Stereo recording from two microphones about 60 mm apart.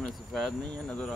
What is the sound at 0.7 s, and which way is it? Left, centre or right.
Speech, centre.